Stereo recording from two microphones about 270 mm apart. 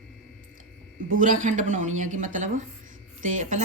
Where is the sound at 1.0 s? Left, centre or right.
Right.